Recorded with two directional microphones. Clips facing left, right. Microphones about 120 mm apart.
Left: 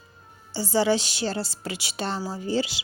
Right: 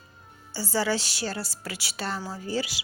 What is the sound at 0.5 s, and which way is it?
Speech, 20° left (ahead or behind).